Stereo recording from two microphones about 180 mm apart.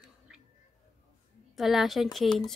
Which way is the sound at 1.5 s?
Centre (ahead or behind).